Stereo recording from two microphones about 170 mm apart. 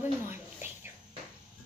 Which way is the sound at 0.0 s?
10° right (ahead or behind).